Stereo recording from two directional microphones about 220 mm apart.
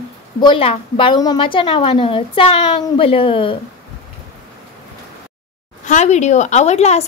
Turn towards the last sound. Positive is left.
turn(degrees=30)  # may be behind; listen again after turning